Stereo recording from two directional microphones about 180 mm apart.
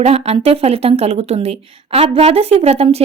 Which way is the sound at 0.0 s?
35° right (ahead or behind).